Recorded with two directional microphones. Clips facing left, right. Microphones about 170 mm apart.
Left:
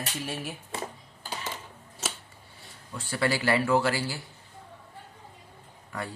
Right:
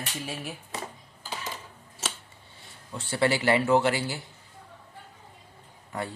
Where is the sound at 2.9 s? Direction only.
25° right (ahead or behind).